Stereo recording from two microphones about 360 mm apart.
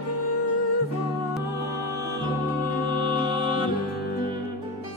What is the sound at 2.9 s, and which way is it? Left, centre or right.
Music, centre.